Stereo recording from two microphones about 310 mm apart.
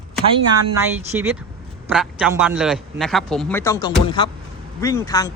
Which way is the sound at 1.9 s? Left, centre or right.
Centre.